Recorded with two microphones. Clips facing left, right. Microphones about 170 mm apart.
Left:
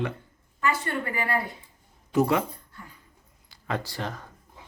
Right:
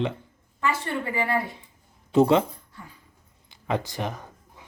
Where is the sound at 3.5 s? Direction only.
20° right (ahead or behind).